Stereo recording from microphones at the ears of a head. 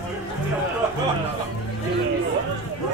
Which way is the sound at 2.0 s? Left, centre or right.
Right.